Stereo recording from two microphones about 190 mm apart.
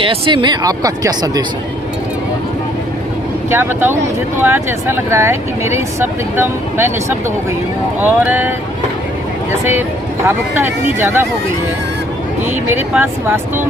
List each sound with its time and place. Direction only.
0.0 s speech: 25° right (ahead or behind)
3.5 s speech: 10° right (ahead or behind)
12.5 s speech: 10° right (ahead or behind)